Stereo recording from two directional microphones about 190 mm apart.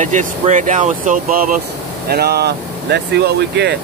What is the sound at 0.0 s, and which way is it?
Speech, 40° right (ahead or behind).